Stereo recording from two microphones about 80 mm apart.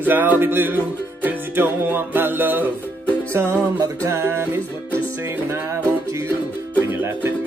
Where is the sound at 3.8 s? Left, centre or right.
Right.